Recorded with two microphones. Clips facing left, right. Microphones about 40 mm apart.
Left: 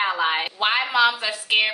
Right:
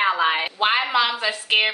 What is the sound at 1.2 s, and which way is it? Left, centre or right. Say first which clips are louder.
Speech: right 1 dB; right.